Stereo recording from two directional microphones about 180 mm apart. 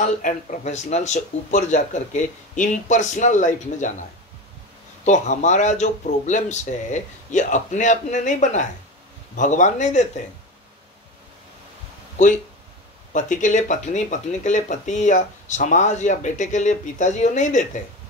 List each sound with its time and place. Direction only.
0.0 s speech: 45° left (ahead or behind)
5.0 s speech: 40° left (ahead or behind)
13.1 s speech: 45° left (ahead or behind)